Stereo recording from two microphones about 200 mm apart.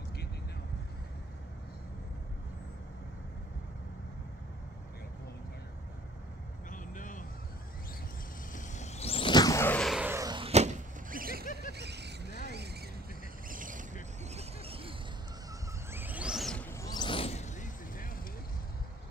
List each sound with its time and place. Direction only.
6.7 s vehicle: 40° left (ahead or behind)
8.5 s whoosh: 35° left (ahead or behind); by 10.1 s centre (ahead or behind)
10.1 s a sound: 20° right (ahead or behind); by 11.4 s 45° right (ahead or behind)
11.7 s vehicle: 55° right (ahead or behind)
13.5 s mechanisms: 40° right (ahead or behind)
14.2 s vehicle: 30° right (ahead or behind)
15.9 s vehicle: 10° right (ahead or behind); by 18.2 s 45° left (ahead or behind)